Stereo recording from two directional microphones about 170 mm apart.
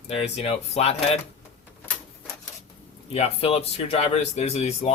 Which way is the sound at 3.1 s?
35° left (ahead or behind).